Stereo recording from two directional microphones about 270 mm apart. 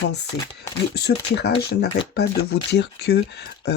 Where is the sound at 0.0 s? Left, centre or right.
Left.